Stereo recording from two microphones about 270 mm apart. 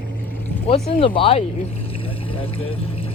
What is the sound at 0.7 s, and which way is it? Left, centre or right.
Speech, left.